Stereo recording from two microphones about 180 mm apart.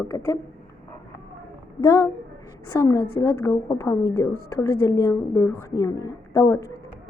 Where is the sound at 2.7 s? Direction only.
15° left (ahead or behind).